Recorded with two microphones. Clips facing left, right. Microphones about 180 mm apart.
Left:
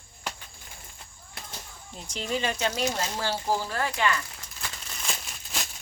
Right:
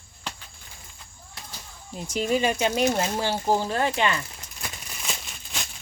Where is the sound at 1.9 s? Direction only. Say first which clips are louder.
Right 7 dB; 5° right (ahead or behind); by 4.7 s 20° right (ahead or behind).